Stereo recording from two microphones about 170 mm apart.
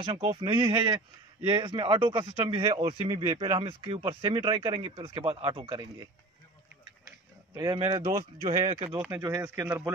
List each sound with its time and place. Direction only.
0.0 s speech: 30° right (ahead or behind)
7.1 s a sound: 20° right (ahead or behind)
7.8 s speech: 35° right (ahead or behind)
9.1 s speech: 15° right (ahead or behind)